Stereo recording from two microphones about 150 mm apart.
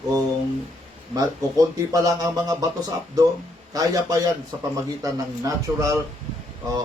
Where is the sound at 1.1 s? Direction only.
25° right (ahead or behind).